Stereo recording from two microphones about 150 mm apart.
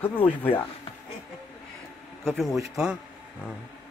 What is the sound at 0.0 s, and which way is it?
Speech, 15° left (ahead or behind).